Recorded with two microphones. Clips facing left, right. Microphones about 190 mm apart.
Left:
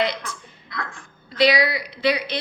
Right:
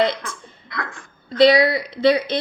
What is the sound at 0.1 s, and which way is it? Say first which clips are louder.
Speech: right 3 dB; 55° right (ahead or behind).